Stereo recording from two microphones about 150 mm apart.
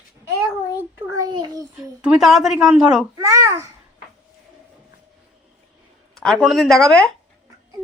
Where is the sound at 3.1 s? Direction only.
20° right (ahead or behind).